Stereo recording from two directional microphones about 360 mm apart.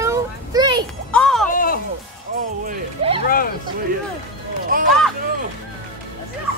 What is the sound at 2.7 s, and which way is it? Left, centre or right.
Speech, centre.